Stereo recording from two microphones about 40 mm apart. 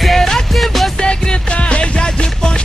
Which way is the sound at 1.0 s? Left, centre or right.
Left.